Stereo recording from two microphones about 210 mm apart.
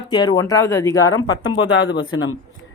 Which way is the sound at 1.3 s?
60° left (ahead or behind).